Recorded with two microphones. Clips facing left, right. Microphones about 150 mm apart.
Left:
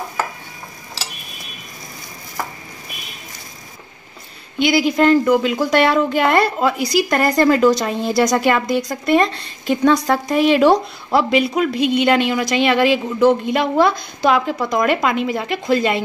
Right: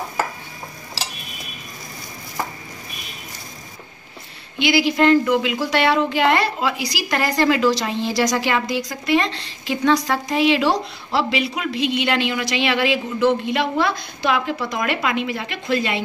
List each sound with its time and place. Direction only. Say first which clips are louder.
4.6 s a woman's voice: left 2 dB; 45° left (ahead or behind)